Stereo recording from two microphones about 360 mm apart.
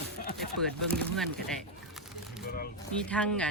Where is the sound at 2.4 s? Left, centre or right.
Left.